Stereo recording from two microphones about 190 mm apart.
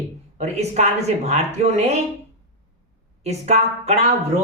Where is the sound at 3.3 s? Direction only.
35° right (ahead or behind).